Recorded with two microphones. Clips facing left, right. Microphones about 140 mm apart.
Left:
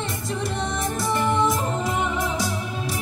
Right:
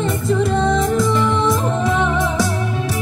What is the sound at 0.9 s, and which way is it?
Music, 90° right.